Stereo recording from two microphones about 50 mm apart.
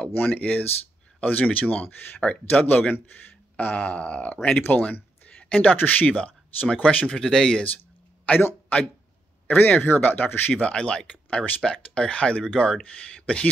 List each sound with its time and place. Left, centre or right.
0.1 s speech: left
0.4 s speech: left
4.6 s a sound: left
5.6 s speech: left; by 7.6 s centre
8.3 s speech: left
9.5 s speech: left
10.5 s speech: centre